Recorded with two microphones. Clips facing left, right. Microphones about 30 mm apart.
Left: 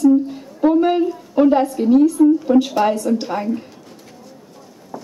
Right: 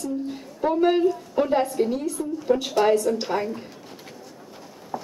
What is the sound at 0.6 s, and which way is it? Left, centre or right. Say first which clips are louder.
A woman's voice: left 5 dB; centre.